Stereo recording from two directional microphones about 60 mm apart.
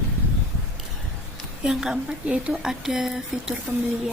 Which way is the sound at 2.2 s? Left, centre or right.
Right.